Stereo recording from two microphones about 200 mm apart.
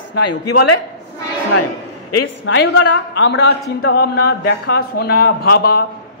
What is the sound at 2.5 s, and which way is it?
A woman's voice, 60° left (ahead or behind).